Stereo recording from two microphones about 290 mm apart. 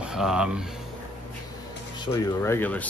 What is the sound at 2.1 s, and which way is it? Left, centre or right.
Speech, centre.